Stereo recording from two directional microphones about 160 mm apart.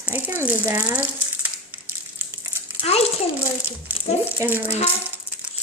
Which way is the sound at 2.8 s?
40° left (ahead or behind).